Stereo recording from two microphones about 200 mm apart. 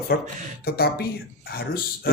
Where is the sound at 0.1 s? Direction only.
50° left (ahead or behind).